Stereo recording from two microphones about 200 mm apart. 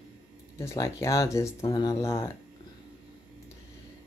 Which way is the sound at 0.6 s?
15° left (ahead or behind).